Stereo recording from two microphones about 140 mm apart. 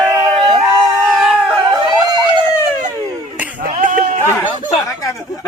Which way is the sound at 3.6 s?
70° right (ahead or behind).